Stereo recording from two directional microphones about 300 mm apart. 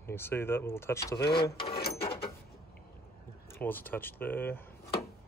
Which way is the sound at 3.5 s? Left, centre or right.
Centre.